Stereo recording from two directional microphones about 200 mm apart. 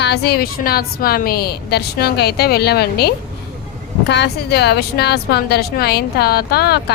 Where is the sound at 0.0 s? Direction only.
55° left (ahead or behind).